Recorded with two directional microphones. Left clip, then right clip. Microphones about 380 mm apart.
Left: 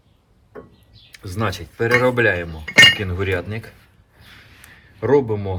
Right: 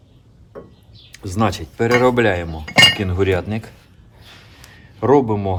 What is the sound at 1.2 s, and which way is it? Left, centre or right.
Speech, centre.